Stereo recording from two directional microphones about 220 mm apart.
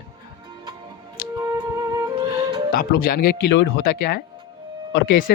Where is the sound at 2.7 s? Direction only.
40° left (ahead or behind).